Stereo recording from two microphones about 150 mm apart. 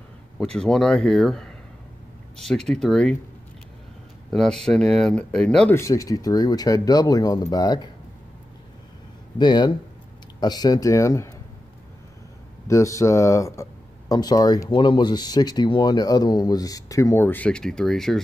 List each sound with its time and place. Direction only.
0.4 s speech: 5° left (ahead or behind)
4.3 s speech: centre (ahead or behind)
5.8 s speech: 20° left (ahead or behind)
9.4 s speech: 30° left (ahead or behind)
12.6 s speech: 20° left (ahead or behind); by 18.2 s 5° left (ahead or behind)